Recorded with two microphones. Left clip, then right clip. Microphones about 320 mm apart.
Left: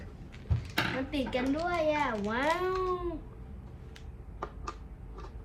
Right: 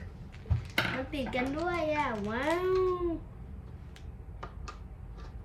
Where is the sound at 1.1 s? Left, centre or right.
Centre.